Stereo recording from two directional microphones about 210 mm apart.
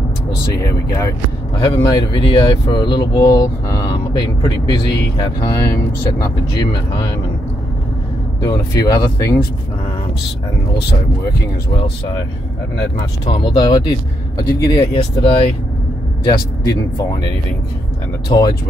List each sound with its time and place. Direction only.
0.6 s speech: 15° left (ahead or behind)
8.5 s speech: 15° left (ahead or behind)
13.2 s speech: 25° left (ahead or behind)